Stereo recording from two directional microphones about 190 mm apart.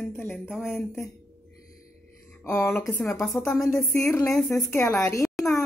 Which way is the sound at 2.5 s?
15° left (ahead or behind).